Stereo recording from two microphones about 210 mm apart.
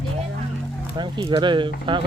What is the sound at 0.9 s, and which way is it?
Speech, 20° right (ahead or behind).